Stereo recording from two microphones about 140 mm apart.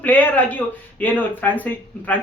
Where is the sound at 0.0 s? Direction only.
10° left (ahead or behind).